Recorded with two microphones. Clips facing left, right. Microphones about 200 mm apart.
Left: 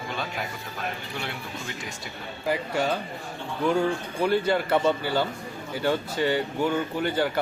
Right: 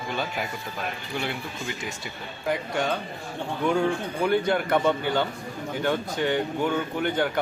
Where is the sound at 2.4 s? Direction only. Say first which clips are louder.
Left 1 dB; 5° left (ahead or behind).